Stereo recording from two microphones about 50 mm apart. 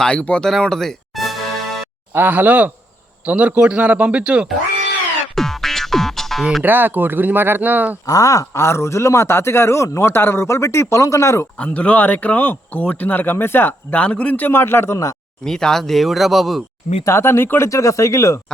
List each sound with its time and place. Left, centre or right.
0.0 s a man's voice: left
0.7 s music: centre
2.1 s speech: right
5.3 s music: centre
6.6 s speech: right
8.3 s speech: left
10.1 s speech: left
11.5 s speech: left
14.0 s a man's voice: left
14.4 s speech: left
15.4 s a man's voice: centre
17.1 s speech: left
17.7 s speech: left